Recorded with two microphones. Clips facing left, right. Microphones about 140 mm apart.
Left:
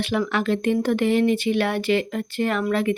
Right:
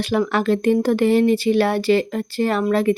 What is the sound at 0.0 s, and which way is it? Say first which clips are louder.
A woman's voice: right 4 dB; 40° right (ahead or behind).